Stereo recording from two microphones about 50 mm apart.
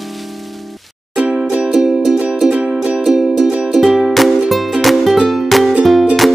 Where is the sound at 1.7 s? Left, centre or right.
Centre.